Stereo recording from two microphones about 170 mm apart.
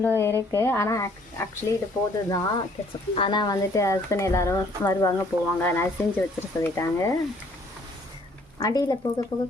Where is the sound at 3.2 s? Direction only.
30° left (ahead or behind).